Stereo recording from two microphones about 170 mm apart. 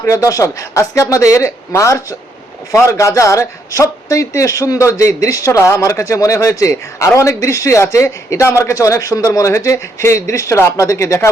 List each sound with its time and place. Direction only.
0.0 s a man's voice: 20° left (ahead or behind)